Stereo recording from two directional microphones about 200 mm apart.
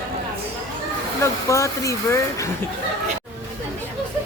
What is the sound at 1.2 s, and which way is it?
Speech, 15° left (ahead or behind).